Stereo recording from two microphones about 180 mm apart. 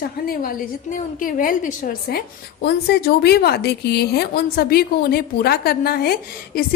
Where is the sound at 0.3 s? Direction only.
50° left (ahead or behind).